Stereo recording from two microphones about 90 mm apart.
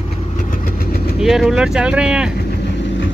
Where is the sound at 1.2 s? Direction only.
5° right (ahead or behind).